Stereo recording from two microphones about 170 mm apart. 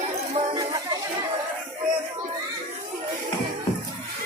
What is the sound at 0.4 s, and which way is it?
Music, 45° right (ahead or behind).